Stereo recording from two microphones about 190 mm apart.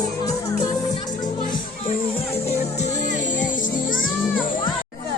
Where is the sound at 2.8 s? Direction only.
40° left (ahead or behind).